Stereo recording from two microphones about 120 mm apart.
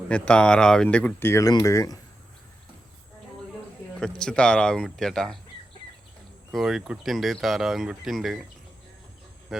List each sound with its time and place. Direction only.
0.1 s speech: 10° left (ahead or behind)
1.3 s speech: 30° left (ahead or behind)
4.0 s speech: 5° left (ahead or behind)
6.5 s speech: 5° right (ahead or behind)
9.5 s speech: 5° right (ahead or behind)